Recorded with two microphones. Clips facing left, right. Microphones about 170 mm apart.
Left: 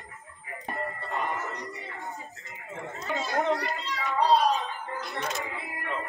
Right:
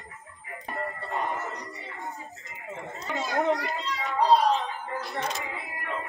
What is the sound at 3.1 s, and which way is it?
Speech, centre (ahead or behind).